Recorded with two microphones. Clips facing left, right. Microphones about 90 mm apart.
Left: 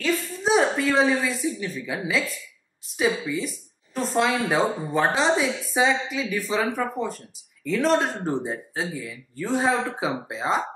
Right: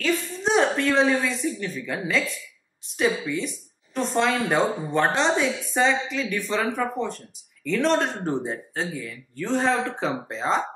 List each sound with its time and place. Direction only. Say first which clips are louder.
0.0 s speech: even; centre (ahead or behind)